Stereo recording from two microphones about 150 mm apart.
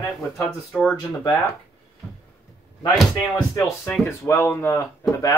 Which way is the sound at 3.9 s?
15° left (ahead or behind).